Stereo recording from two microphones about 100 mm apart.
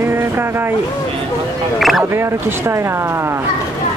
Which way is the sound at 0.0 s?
25° right (ahead or behind).